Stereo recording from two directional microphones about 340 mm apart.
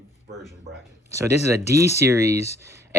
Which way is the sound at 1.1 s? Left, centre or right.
Centre.